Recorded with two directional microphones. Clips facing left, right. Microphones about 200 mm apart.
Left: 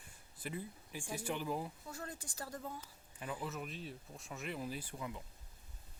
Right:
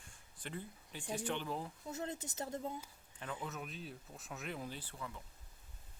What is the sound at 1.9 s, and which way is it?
Speech, 25° right (ahead or behind).